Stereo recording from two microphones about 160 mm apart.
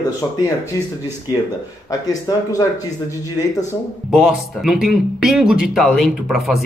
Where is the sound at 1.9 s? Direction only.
20° left (ahead or behind).